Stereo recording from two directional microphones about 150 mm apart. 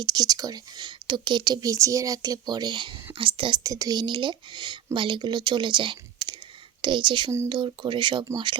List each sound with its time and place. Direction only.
0.0 s speech: 25° right (ahead or behind)
3.6 s speech: 25° right (ahead or behind)
7.3 s speech: 20° right (ahead or behind)
7.5 s speech: 30° right (ahead or behind)